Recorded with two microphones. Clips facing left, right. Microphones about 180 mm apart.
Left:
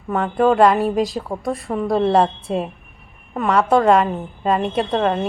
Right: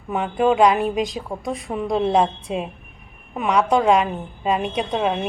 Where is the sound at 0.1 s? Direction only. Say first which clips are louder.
Left 2 dB; 5° right (ahead or behind).